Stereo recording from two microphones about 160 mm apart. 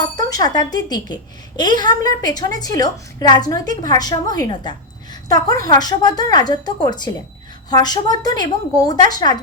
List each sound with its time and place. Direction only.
0.2 s a woman's voice: 25° left (ahead or behind)